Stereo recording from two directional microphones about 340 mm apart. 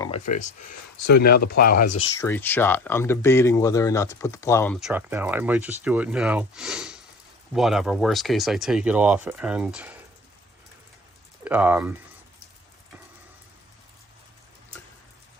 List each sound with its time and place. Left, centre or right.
0.0 s speech: centre
2.2 s speech: centre
4.9 s speech: centre
11.4 s speech: centre